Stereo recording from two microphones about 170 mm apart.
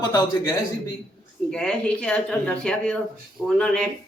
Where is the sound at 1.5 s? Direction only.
5° left (ahead or behind).